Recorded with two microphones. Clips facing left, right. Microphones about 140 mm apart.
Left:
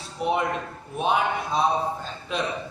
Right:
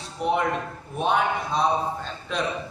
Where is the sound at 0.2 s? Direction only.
Centre (ahead or behind).